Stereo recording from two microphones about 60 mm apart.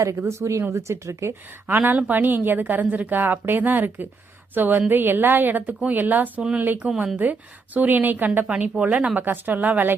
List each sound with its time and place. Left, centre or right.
0.0 s speech: right
1.6 s a woman's voice: right
6.7 s speech: centre
7.2 s speech: right
8.7 s speech: right
9.2 s speech: right